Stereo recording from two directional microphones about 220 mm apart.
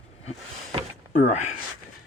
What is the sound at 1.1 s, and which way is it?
Speech, 30° left (ahead or behind).